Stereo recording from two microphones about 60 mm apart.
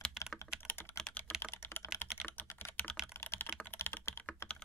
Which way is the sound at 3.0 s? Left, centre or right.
Left.